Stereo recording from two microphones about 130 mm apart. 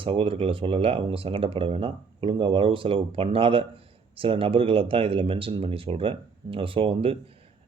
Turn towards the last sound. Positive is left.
turn(degrees=-45)  # may be behind; listen again after turning